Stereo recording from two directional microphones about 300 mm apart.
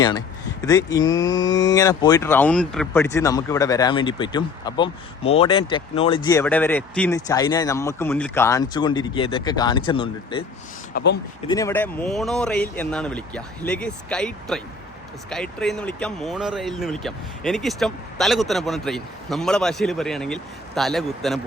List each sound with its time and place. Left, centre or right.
0.6 s speech: centre
10.9 s speech: left
11.4 s speech: centre